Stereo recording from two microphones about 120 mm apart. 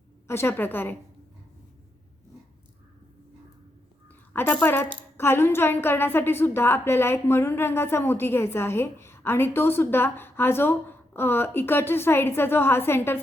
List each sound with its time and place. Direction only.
0.3 s a woman's voice: 20° left (ahead or behind)
4.3 s a sound: 20° left (ahead or behind)
4.6 s a woman's voice: 15° left (ahead or behind)